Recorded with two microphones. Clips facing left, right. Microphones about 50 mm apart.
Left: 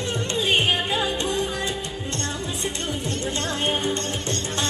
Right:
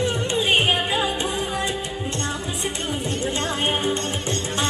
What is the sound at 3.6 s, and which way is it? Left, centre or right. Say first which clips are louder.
Music: right 1 dB; centre.